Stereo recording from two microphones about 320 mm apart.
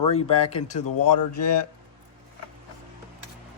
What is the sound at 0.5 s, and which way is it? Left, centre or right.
Speech, left.